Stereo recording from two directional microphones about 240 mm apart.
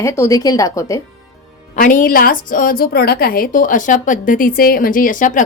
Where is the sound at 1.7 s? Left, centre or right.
Left.